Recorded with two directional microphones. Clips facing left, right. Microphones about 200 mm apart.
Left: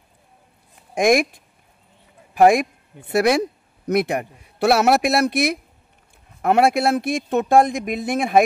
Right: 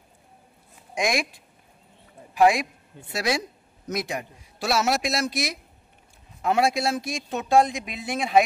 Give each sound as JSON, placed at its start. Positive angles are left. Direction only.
{"t": 0.9, "sound": "speech", "side_deg": 55}
{"t": 2.3, "sound": "a man's voice", "side_deg": 50}